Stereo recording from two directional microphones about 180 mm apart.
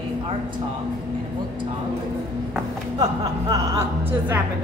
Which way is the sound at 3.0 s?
25° right (ahead or behind).